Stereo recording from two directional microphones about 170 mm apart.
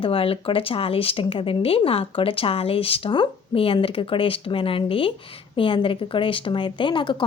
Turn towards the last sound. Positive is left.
turn(degrees=30)  # may be behind; listen again after turning